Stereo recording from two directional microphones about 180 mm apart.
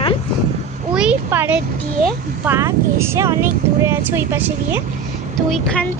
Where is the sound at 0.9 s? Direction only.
5° right (ahead or behind).